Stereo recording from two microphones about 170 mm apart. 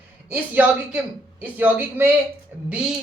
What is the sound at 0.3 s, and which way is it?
A woman's voice, 10° right (ahead or behind).